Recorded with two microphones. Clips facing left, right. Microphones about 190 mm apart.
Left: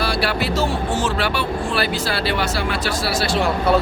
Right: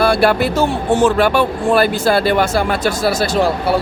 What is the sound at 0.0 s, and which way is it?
Speech, 50° right (ahead or behind).